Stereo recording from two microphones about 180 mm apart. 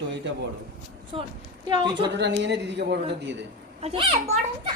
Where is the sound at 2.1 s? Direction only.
75° right (ahead or behind).